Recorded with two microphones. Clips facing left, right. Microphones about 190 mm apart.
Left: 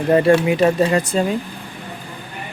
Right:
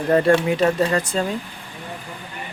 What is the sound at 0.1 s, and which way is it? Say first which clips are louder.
Speech: left 3 dB; 5° left (ahead or behind).